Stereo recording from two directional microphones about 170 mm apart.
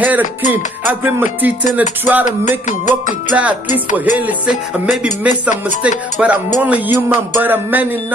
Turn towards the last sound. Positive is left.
turn(degrees=-10)  # may be behind; listen again after turning